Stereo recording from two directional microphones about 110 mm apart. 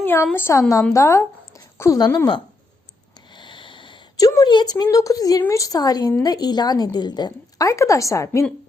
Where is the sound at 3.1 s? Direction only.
45° left (ahead or behind).